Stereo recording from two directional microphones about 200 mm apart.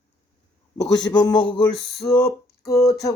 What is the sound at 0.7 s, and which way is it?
Male singing, 20° left (ahead or behind).